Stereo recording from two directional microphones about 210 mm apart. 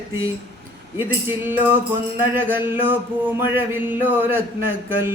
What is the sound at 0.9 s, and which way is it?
A man's voice, 10° right (ahead or behind).